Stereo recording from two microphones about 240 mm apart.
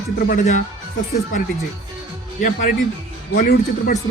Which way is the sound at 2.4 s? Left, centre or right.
Left.